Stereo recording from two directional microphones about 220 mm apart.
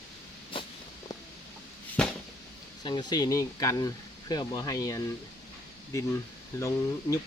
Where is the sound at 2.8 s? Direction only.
20° left (ahead or behind).